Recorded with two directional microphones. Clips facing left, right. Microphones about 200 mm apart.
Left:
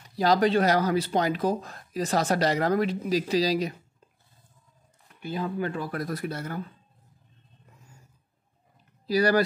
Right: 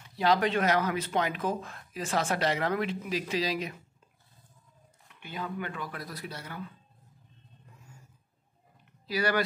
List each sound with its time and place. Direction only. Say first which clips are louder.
0.1 s speech: left 4 dB; 40° left (ahead or behind)
5.2 s speech: left 7 dB; 35° left (ahead or behind)
5.9 s speech: left 9 dB; 50° left (ahead or behind)
9.0 s speech: left 7 dB; 35° left (ahead or behind)